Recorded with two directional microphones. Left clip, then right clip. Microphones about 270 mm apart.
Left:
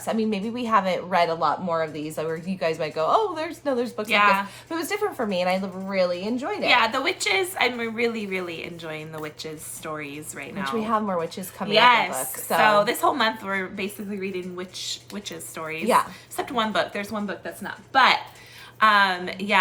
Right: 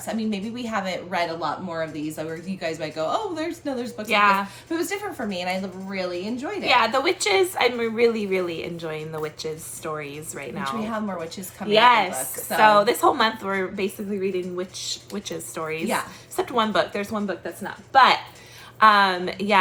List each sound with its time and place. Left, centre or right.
0.0 s speech: centre
4.0 s a woman's voice: centre
4.7 s a woman's voice: centre
6.7 s a woman's voice: centre
10.8 s speech: centre
11.7 s a woman's voice: centre